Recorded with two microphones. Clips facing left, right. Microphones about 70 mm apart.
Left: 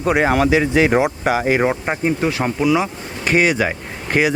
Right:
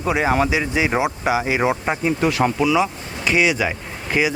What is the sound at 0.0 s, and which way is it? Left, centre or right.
Speech, left.